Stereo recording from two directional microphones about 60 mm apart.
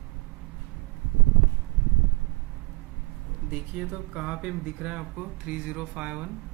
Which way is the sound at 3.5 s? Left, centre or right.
Centre.